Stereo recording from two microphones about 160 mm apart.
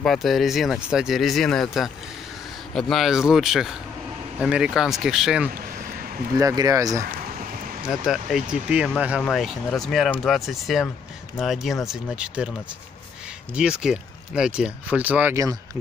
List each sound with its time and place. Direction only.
0.0 s speech: centre (ahead or behind)
6.3 s speech: 25° right (ahead or behind)
7.9 s speech: centre (ahead or behind)
13.6 s speech: 5° right (ahead or behind)